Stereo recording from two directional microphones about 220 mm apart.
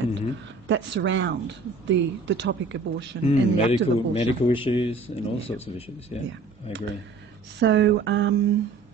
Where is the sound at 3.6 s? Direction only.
25° left (ahead or behind).